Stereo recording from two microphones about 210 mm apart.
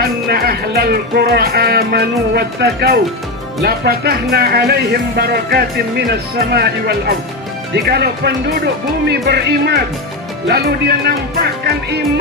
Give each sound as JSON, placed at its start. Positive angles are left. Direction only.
{"t": 0.3, "sound": "speech", "side_deg": -45}